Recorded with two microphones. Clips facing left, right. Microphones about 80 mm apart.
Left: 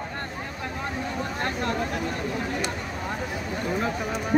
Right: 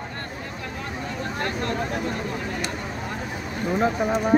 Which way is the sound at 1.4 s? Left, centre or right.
Left.